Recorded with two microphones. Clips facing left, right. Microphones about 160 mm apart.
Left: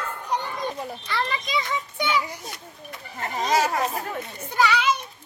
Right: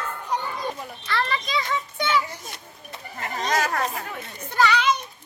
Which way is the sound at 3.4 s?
5° left (ahead or behind).